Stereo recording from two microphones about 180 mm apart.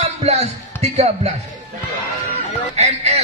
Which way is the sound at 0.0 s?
35° right (ahead or behind).